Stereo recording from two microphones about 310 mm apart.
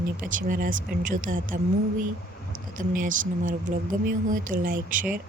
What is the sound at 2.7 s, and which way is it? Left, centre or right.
Speech, right.